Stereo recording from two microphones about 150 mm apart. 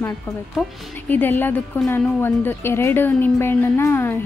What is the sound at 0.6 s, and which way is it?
A woman's voice, 10° left (ahead or behind).